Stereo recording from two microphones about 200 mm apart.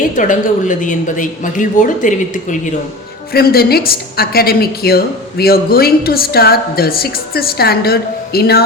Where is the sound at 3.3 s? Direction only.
50° left (ahead or behind).